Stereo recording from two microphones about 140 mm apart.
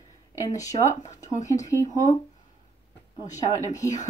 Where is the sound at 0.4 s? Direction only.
25° left (ahead or behind).